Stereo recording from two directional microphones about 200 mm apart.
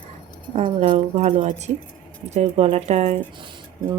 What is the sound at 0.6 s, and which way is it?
A woman's voice, 35° right (ahead or behind).